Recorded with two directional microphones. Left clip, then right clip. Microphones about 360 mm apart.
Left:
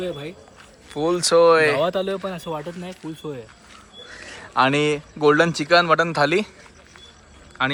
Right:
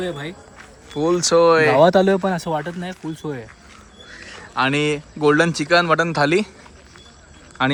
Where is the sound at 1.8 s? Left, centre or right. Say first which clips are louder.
Right 8 dB; right.